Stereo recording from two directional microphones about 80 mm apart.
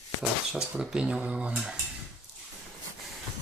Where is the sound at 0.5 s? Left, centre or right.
Centre.